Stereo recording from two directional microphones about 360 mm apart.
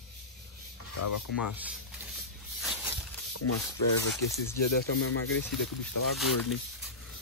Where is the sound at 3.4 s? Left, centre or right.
Left.